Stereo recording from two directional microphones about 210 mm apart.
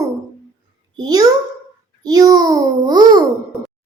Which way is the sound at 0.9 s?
20° right (ahead or behind).